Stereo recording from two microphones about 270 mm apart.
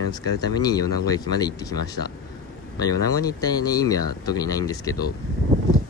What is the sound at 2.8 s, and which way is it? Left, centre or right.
Speech, centre.